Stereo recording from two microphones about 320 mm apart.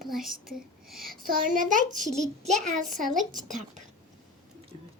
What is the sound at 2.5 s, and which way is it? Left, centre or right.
Speech, right.